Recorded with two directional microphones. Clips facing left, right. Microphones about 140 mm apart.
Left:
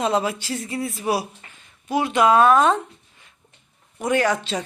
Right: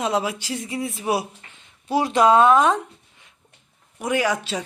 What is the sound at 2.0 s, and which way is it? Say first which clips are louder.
Speech: right 1 dB; 35° right (ahead or behind).